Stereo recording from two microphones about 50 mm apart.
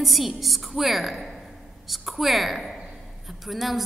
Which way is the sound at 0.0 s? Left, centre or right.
Centre.